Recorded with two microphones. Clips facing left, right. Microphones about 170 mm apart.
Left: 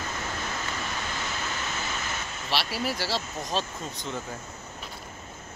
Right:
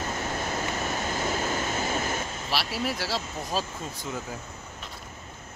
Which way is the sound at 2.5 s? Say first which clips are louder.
Left 1 dB; centre (ahead or behind).